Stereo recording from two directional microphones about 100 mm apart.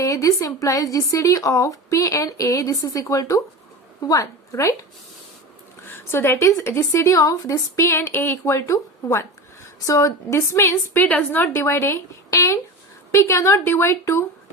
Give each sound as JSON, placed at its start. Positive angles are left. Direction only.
{"t": 0.0, "sound": "a woman's voice", "side_deg": 35}
{"t": 5.9, "sound": "a woman's voice", "side_deg": 25}